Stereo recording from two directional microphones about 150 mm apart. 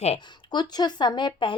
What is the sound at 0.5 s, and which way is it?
Speech, 30° left (ahead or behind).